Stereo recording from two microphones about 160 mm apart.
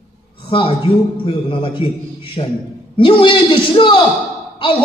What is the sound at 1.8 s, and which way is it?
A man's voice, 35° left (ahead or behind).